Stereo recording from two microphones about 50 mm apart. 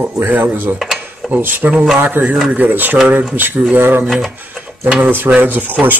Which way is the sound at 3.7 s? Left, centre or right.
Right.